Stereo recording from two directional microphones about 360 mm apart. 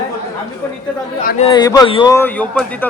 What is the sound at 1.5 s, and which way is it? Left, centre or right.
A man's voice, centre.